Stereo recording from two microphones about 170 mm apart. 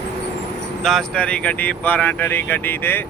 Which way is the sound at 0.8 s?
5° left (ahead or behind).